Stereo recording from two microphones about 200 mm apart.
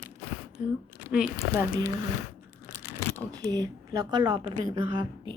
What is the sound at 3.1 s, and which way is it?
A woman's voice, 20° right (ahead or behind).